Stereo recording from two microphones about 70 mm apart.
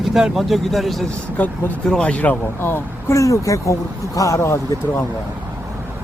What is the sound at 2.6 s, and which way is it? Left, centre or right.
Speech, left.